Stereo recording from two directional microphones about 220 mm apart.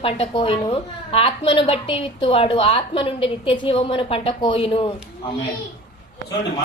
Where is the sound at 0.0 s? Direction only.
25° left (ahead or behind).